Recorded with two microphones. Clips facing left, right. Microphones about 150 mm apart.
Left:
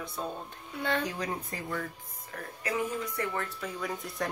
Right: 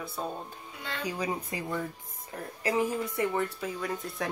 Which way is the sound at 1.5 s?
20° right (ahead or behind).